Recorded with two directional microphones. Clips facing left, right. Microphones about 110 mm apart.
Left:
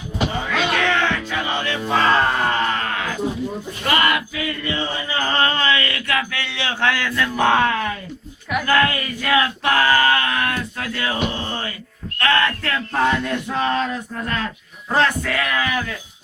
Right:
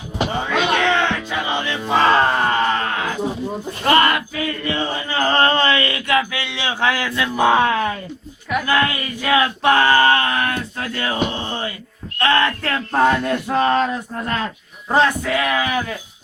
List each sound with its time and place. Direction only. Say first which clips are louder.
0.3 s music: right 3 dB; 25° right (ahead or behind)
3.8 s a sound: right 4 dB; 35° right (ahead or behind); by 7.1 s 15° right (ahead or behind)
7.2 s speech: right 2 dB; 10° right (ahead or behind)
7.7 s speech: right 3 dB; 25° right (ahead or behind)
12.2 s male singing: right 2 dB; 30° right (ahead or behind)
14.8 s speech: right 2 dB; 15° right (ahead or behind)